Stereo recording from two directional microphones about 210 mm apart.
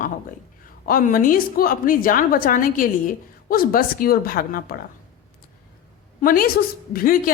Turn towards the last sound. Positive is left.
turn(degrees=45)  # may be behind; listen again after turning